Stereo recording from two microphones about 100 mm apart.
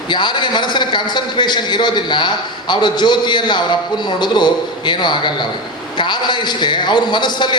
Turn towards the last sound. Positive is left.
turn(degrees=50)  # may be behind; listen again after turning